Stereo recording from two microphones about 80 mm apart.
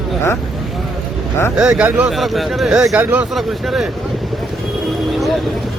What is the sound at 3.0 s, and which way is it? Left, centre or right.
Speech, centre.